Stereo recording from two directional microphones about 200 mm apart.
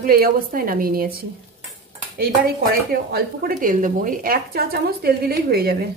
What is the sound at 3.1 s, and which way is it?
A woman's voice, 45° right (ahead or behind).